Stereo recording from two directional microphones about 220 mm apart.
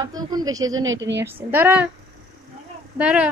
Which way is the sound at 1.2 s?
10° right (ahead or behind).